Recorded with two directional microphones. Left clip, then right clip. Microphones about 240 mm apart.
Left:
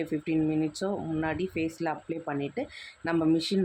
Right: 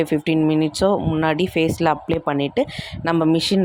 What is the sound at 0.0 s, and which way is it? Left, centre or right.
Speech, right.